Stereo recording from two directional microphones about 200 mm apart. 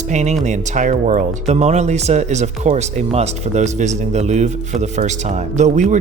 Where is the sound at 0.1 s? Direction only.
35° right (ahead or behind).